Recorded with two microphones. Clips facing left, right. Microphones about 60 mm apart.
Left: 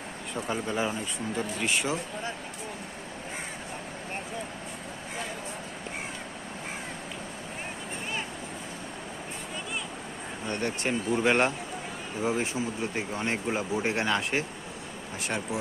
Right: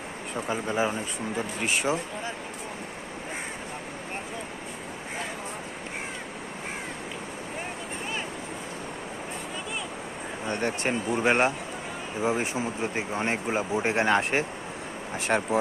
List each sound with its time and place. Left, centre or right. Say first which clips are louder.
0.3 s speech: right 2 dB; centre
10.4 s speech: right 2 dB; right